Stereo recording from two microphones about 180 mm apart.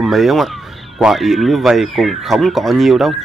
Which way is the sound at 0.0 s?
Centre (ahead or behind).